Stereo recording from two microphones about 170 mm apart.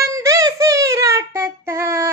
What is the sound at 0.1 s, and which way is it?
Child singing, 20° right (ahead or behind).